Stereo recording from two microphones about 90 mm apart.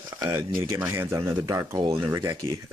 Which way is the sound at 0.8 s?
30° right (ahead or behind).